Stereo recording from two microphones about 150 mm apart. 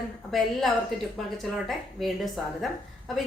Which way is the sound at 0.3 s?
Centre (ahead or behind).